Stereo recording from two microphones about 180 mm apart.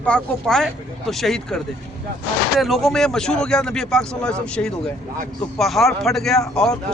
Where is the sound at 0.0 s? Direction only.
5° left (ahead or behind).